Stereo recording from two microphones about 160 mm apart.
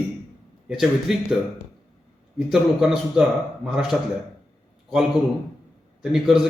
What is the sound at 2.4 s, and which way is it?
A man's voice, centre (ahead or behind).